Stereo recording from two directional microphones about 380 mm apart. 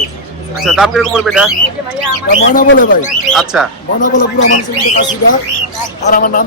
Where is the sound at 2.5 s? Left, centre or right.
Left.